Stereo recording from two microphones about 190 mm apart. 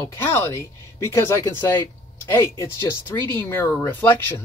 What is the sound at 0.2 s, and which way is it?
Speech, 15° left (ahead or behind).